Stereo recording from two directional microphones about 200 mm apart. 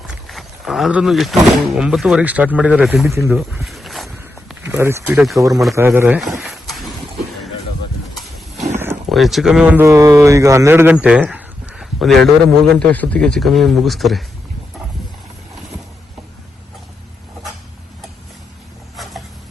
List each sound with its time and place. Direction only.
0.1 s wild animals: centre (ahead or behind)
1.7 s speech: 5° right (ahead or behind)
3.2 s walk: 5° right (ahead or behind)
4.6 s speech: 15° right (ahead or behind)
5.4 s a man's voice: 15° right (ahead or behind)
6.4 s a sound: centre (ahead or behind)
8.7 s a sound: 10° right (ahead or behind)
9.0 s speech: centre (ahead or behind)